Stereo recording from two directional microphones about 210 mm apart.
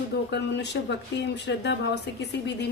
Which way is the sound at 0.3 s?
55° left (ahead or behind).